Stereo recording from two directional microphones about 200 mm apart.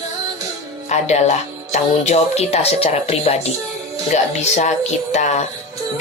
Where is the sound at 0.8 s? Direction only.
35° left (ahead or behind).